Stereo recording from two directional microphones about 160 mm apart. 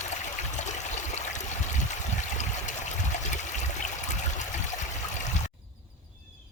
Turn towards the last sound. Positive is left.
turn(degrees=50)  # may be behind; listen again after turning